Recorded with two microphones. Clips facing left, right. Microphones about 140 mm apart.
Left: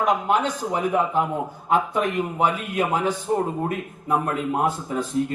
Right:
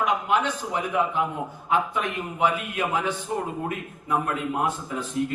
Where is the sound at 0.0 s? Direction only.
40° left (ahead or behind).